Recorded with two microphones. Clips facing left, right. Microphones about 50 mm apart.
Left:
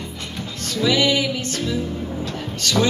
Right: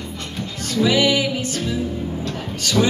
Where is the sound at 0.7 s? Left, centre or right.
Centre.